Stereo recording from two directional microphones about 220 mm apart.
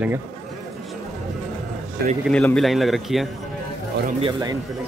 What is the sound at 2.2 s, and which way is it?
A man's voice, 5° left (ahead or behind).